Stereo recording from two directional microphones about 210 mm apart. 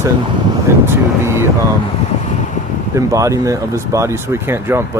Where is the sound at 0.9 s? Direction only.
10° right (ahead or behind).